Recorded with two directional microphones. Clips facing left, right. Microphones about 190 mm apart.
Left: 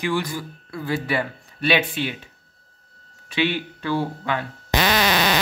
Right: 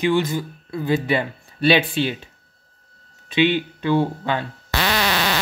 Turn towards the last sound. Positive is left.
turn(degrees=15)  # may be behind; listen again after turning